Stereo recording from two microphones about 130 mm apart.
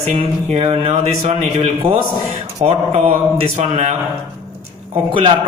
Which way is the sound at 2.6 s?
55° right (ahead or behind).